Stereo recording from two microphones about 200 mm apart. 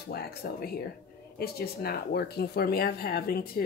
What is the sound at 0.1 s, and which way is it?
Speech, 50° left (ahead or behind).